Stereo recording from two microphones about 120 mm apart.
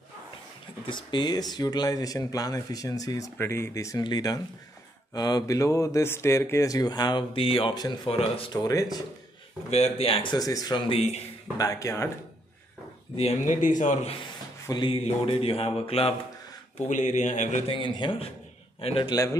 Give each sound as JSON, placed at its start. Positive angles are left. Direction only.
{"t": 0.8, "sound": "speech", "side_deg": 40}
{"t": 3.3, "sound": "speech", "side_deg": 20}
{"t": 7.3, "sound": "speech", "side_deg": 50}
{"t": 7.7, "sound": "speech", "side_deg": 35}
{"t": 8.5, "sound": "speech", "side_deg": 30}
{"t": 9.7, "sound": "speech", "side_deg": 60}
{"t": 10.9, "sound": "speech", "side_deg": 65}
{"t": 11.5, "sound": "speech", "side_deg": 30}
{"t": 13.1, "sound": "a man's voice", "side_deg": 60}
{"t": 14.7, "sound": "speech", "side_deg": 45}
{"t": 16.7, "sound": "speech", "side_deg": 90}
{"t": 17.6, "sound": "speech", "side_deg": 45}